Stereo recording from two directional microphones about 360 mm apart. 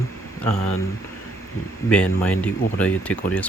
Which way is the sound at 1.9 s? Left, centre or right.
Centre.